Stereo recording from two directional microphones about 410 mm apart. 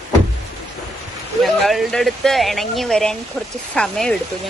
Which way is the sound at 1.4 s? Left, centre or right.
Centre.